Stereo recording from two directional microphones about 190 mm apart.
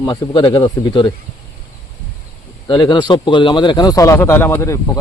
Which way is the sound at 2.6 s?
25° left (ahead or behind).